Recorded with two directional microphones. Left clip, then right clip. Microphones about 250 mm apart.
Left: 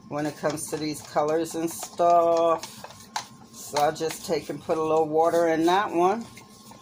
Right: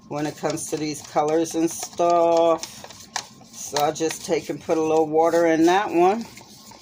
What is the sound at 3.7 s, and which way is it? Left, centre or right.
Speech, right.